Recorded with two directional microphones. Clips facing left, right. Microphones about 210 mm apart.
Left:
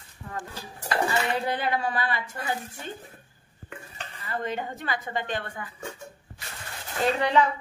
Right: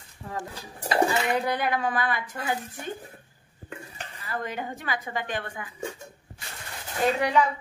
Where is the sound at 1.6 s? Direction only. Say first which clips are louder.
Right 1 dB; 15° right (ahead or behind).